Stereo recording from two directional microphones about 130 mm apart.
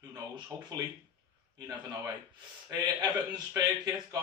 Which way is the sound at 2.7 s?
30° right (ahead or behind).